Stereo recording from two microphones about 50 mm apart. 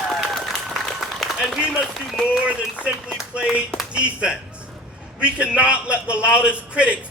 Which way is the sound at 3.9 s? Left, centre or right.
Right.